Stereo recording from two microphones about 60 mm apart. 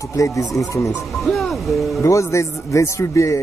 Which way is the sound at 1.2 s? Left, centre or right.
Centre.